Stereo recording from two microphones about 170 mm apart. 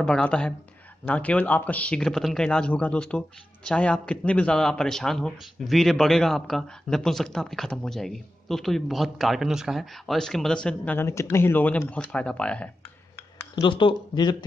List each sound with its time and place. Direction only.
0.0 s speech: 5° left (ahead or behind)
13.6 s speech: 30° left (ahead or behind)